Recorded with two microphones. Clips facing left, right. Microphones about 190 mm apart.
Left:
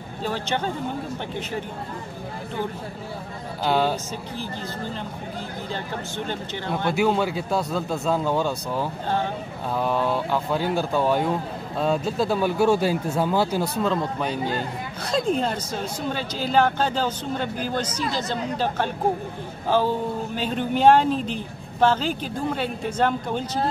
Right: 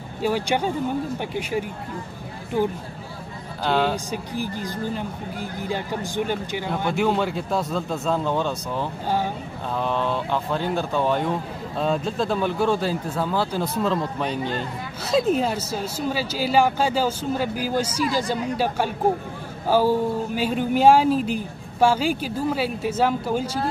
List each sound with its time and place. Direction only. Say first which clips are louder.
0.2 s speech: right 4 dB; 10° right (ahead or behind)
3.6 s speech: even; 10° left (ahead or behind)
3.9 s speech: right 2 dB; 15° right (ahead or behind)
6.9 s a man's voice: left 1 dB; 5° left (ahead or behind)
13.8 s a man's voice: even; centre (ahead or behind)